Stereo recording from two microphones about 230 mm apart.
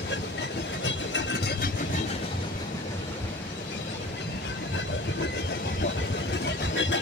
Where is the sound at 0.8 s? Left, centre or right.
Left.